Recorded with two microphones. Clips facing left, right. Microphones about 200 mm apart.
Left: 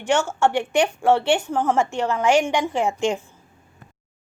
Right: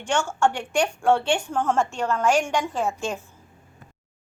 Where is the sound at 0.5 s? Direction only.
5° left (ahead or behind).